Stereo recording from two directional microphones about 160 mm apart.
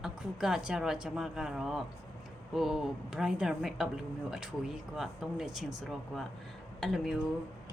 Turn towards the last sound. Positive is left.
turn(degrees=0)  # may be behind; listen again after turning